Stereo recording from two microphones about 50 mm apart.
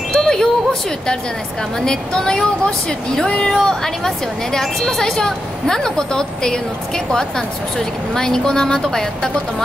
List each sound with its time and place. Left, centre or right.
0.1 s wind chime: centre
1.9 s a woman's voice: centre